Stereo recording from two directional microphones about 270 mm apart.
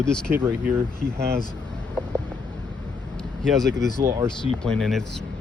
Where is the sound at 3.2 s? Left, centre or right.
Centre.